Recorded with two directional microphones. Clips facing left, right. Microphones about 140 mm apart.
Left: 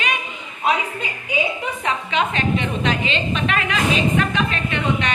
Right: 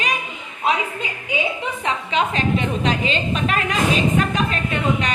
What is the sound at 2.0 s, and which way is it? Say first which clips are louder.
A woman's voice: right 1 dB; 35° right (ahead or behind).